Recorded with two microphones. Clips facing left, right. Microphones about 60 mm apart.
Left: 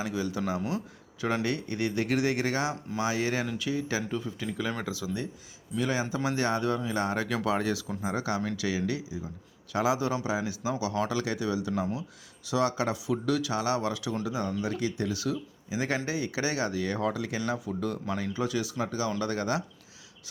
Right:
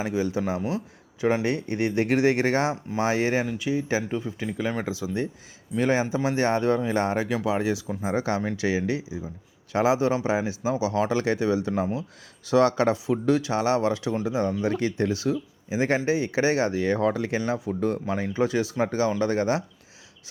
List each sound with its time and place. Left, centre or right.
0.0 s speech: right
3.4 s speech: centre; by 6.1 s right
6.1 s speech: right
7.3 s speech: centre; by 12.0 s right
12.5 s speech: right
14.7 s speech: right